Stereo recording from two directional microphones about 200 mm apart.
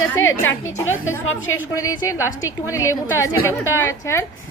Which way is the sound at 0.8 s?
80° left.